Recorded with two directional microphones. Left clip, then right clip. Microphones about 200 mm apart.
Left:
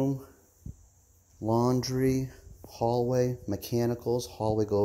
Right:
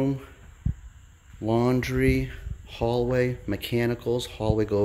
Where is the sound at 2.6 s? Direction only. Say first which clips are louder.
Right 2 dB; centre (ahead or behind).